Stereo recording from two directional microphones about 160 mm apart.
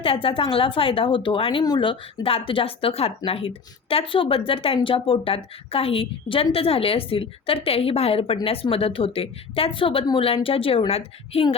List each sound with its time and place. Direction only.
0.0 s speech: 35° left (ahead or behind)